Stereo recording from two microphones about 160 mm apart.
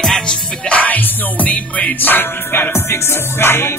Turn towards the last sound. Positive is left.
turn(degrees=15)  # may be behind; listen again after turning